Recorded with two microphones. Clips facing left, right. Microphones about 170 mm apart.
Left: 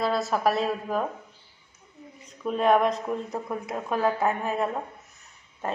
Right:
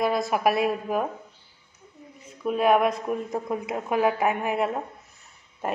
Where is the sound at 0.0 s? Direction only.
15° right (ahead or behind).